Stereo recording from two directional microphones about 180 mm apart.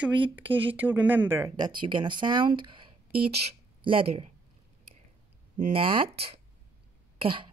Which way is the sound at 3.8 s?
30° right (ahead or behind).